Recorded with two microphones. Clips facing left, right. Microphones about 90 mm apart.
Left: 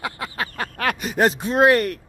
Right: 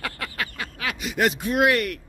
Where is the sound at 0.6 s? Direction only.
50° left (ahead or behind).